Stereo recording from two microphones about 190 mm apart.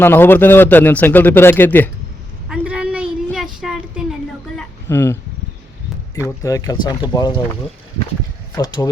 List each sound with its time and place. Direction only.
0.0 s speech: 10° left (ahead or behind)
2.5 s a sound: 5° right (ahead or behind)
3.3 s child singing: centre (ahead or behind)
4.5 s a sound: 10° left (ahead or behind)
6.1 s speech: 15° left (ahead or behind)
8.5 s speech: 20° left (ahead or behind)